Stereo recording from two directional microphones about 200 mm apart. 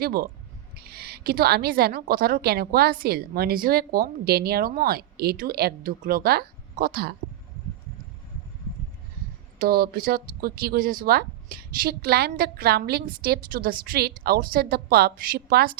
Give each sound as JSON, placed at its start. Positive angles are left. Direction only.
{"t": 0.0, "sound": "a woman's voice", "side_deg": -50}
{"t": 9.6, "sound": "a woman's voice", "side_deg": -50}